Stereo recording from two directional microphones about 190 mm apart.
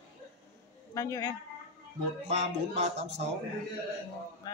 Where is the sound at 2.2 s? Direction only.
35° right (ahead or behind).